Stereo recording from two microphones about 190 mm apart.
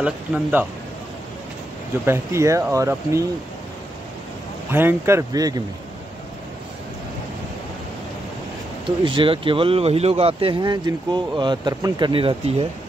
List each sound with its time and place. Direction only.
0.0 s speech: 10° right (ahead or behind)
2.0 s speech: 15° right (ahead or behind)
4.6 s speech: 10° right (ahead or behind)
9.0 s speech: 25° right (ahead or behind)